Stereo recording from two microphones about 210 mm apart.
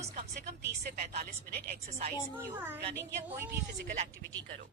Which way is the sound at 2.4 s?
10° right (ahead or behind).